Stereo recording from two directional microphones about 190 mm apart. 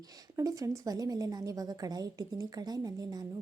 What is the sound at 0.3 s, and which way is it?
A woman's voice, 15° right (ahead or behind).